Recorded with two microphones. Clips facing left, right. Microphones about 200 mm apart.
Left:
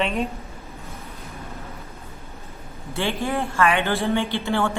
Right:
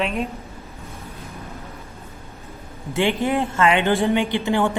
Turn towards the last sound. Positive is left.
turn(degrees=-15)  # may be behind; listen again after turning